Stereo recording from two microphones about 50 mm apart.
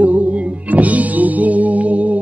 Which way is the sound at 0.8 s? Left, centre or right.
Right.